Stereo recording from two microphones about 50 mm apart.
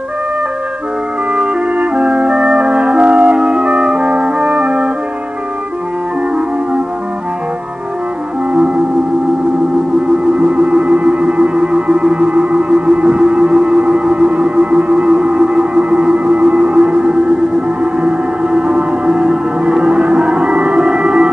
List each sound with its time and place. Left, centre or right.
1.3 s music: right
10.4 s music: right